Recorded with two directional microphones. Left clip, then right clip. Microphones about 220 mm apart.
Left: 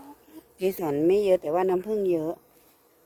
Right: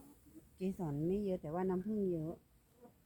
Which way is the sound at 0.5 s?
45° left (ahead or behind).